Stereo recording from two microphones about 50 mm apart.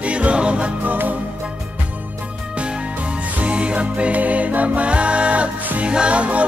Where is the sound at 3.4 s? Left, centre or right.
Right.